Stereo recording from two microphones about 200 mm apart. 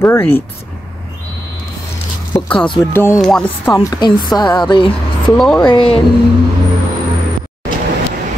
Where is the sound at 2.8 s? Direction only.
15° left (ahead or behind).